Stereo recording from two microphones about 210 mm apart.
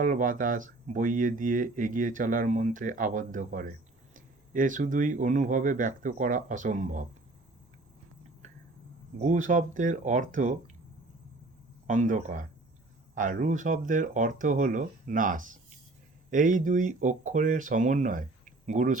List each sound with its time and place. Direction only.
0.0 s speech: 40° right (ahead or behind)
9.2 s speech: 35° right (ahead or behind)
11.9 s speech: 35° right (ahead or behind)